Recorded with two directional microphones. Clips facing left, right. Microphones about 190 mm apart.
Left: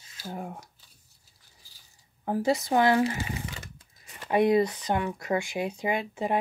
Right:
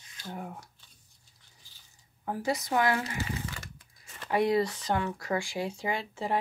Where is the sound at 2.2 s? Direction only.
25° left (ahead or behind).